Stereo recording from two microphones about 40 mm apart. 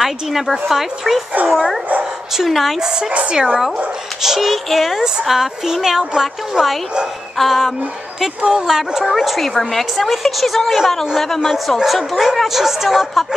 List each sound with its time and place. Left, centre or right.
0.0 s a woman's voice: centre
2.3 s a woman's voice: centre
2.8 s speech: centre
3.1 s speech: right
4.2 s a woman's voice: centre
7.3 s a woman's voice: centre
8.5 s a woman's voice: centre
11.4 s a woman's voice: centre